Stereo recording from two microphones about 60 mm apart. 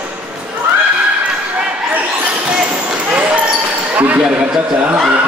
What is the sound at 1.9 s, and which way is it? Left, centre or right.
Basketball bounce, right.